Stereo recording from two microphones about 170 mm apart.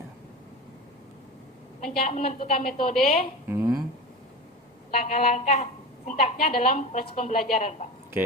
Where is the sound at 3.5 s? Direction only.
15° right (ahead or behind).